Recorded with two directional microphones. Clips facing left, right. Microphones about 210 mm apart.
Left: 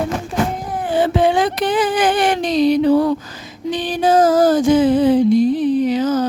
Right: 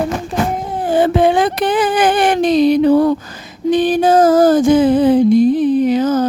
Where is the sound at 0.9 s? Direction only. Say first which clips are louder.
Right 3 dB; 50° right (ahead or behind).